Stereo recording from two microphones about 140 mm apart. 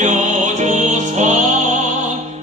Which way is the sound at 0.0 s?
60° right (ahead or behind).